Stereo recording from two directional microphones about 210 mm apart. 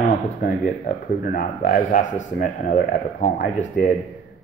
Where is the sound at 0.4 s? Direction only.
40° left (ahead or behind).